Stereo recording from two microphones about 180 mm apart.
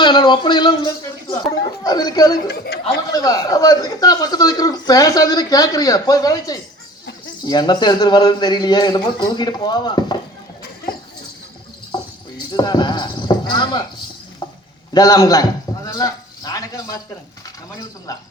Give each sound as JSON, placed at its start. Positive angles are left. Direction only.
{"t": 0.0, "sound": "speech", "side_deg": 25}
{"t": 11.9, "sound": "a sound", "side_deg": 25}
{"t": 12.5, "sound": "speech", "side_deg": 25}
{"t": 14.9, "sound": "a man's voice", "side_deg": 20}